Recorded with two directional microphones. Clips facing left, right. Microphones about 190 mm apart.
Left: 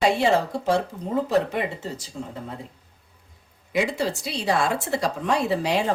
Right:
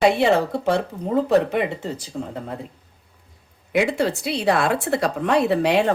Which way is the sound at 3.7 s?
60° right (ahead or behind).